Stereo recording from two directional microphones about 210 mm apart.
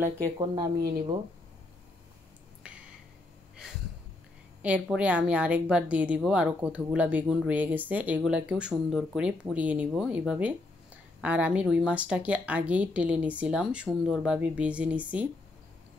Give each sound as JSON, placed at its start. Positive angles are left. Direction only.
{"t": 0.0, "sound": "speech", "side_deg": -15}
{"t": 4.6, "sound": "a woman's voice", "side_deg": -5}